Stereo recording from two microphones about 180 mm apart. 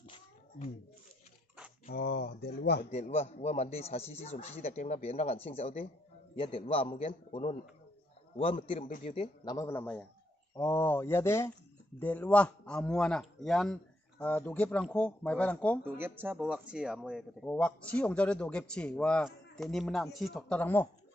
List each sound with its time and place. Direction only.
0.0 s a sound: 30° left (ahead or behind)
1.9 s speech: 60° left (ahead or behind)
2.9 s speech: 35° left (ahead or behind)
9.4 s a man's voice: 20° left (ahead or behind)
15.8 s a man's voice: 10° right (ahead or behind); by 20.9 s 10° left (ahead or behind)